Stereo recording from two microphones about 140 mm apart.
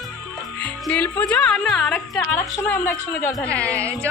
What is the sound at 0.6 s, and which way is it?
Speech, 10° left (ahead or behind).